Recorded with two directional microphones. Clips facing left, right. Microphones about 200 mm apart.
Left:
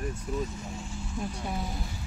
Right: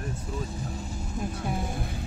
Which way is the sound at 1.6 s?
55° right (ahead or behind).